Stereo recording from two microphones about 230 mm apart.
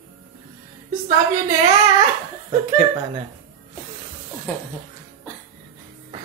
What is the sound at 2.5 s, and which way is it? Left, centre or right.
Speech, right.